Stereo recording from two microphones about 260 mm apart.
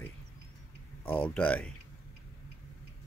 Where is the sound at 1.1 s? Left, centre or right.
Centre.